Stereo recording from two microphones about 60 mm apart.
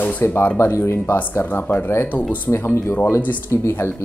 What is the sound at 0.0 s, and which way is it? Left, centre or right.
Speech, left.